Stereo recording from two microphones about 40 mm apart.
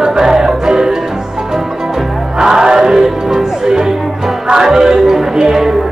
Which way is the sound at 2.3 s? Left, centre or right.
Centre.